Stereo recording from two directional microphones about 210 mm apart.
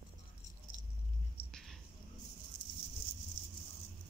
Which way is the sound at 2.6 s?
20° left (ahead or behind).